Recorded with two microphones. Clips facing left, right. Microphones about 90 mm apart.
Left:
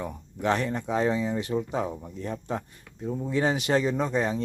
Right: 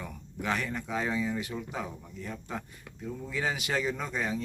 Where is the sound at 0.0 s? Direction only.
30° left (ahead or behind).